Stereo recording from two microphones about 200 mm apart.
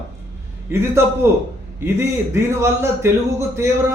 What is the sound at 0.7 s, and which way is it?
A man's voice, 10° right (ahead or behind).